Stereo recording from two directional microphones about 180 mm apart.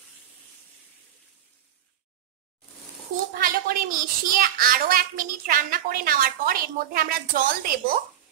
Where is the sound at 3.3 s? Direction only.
50° right (ahead or behind).